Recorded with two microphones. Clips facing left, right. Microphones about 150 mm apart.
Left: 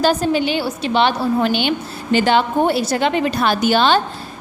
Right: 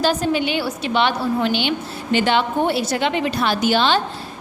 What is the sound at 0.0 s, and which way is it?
A woman's voice, 40° left (ahead or behind).